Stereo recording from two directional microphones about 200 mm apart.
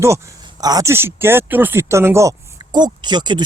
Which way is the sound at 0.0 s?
15° right (ahead or behind).